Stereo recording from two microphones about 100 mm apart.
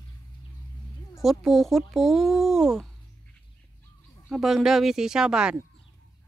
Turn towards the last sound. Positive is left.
turn(degrees=-10)  # may be behind; listen again after turning